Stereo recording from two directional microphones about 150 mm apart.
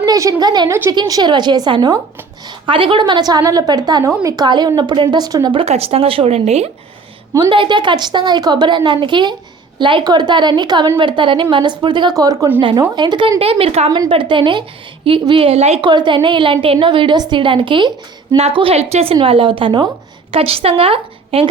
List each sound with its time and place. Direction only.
0.0 s a woman's voice: 25° right (ahead or behind)
0.7 s a woman's voice: 15° right (ahead or behind); by 6.7 s 45° right (ahead or behind)
7.3 s a woman's voice: 30° right (ahead or behind)
12.5 s a woman's voice: 35° right (ahead or behind)
13.9 s a woman's voice: 30° right (ahead or behind)
15.9 s a woman's voice: 30° right (ahead or behind)